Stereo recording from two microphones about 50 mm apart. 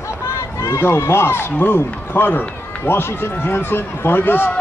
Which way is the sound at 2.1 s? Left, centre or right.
Left.